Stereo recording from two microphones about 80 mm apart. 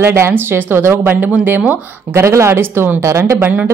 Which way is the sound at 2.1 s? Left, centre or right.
Right.